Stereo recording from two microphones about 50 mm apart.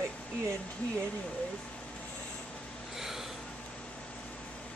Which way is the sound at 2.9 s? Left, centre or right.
Centre.